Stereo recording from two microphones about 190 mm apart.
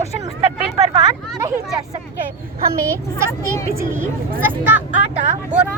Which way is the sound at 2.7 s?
15° right (ahead or behind).